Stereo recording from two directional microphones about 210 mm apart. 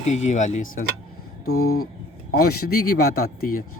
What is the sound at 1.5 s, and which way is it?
Speech, 90° left.